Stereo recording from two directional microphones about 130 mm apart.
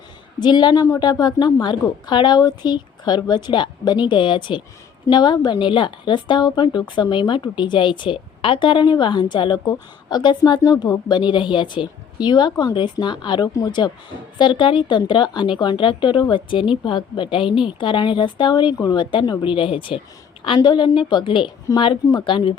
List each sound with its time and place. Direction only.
0.3 s a woman's voice: 35° left (ahead or behind)